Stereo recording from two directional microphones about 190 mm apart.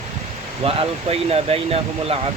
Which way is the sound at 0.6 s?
30° right (ahead or behind).